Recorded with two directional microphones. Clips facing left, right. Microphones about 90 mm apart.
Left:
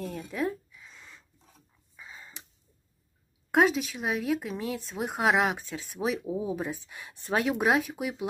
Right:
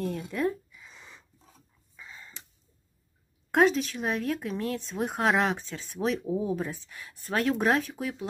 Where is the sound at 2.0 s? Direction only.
15° left (ahead or behind).